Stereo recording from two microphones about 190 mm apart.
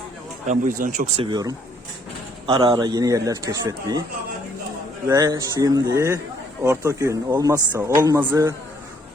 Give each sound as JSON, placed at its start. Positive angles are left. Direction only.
{"t": 0.4, "sound": "a man's voice", "side_deg": -45}
{"t": 5.0, "sound": "speech", "side_deg": -20}